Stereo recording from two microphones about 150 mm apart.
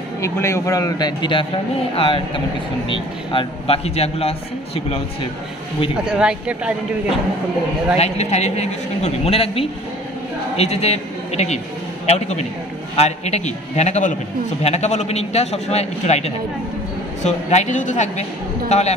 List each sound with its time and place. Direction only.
0.2 s a man's voice: 20° left (ahead or behind); by 5.0 s 40° left (ahead or behind)
6.0 s speech: 5° right (ahead or behind)
8.0 s a man's voice: 45° left (ahead or behind)